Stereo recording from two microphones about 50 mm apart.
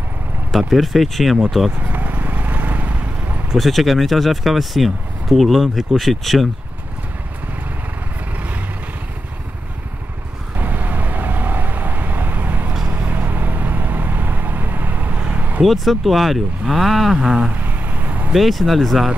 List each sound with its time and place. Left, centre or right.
0.5 s speech: centre
1.8 s vehicle: right
3.5 s speech: centre
10.6 s vehicle: right
15.6 s speech: centre
17.6 s vehicle: right
18.3 s speech: centre